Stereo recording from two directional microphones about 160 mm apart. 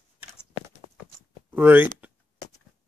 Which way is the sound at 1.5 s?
10° right (ahead or behind).